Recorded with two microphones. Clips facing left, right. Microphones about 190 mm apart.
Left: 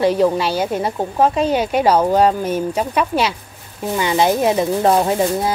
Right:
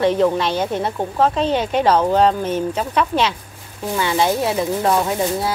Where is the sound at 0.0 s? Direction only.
10° left (ahead or behind).